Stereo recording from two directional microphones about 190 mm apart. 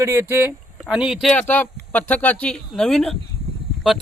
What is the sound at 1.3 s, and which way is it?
Speech, 10° left (ahead or behind).